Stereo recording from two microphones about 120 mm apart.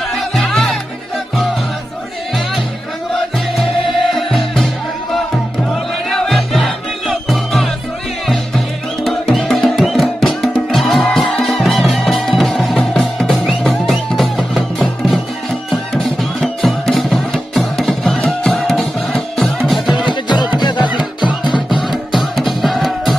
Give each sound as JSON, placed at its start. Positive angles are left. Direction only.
{"t": 0.2, "sound": "music", "side_deg": 0}
{"t": 3.5, "sound": "music", "side_deg": 0}
{"t": 15.7, "sound": "music", "side_deg": 0}
{"t": 20.1, "sound": "music", "side_deg": 40}
{"t": 21.6, "sound": "music", "side_deg": 0}